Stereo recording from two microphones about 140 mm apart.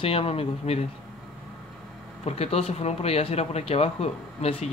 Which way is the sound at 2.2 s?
50° left (ahead or behind).